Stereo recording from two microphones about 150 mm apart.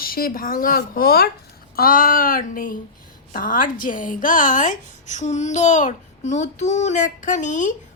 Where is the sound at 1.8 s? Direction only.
70° left (ahead or behind).